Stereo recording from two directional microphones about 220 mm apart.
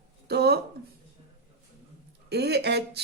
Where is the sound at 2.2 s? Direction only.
50° right (ahead or behind).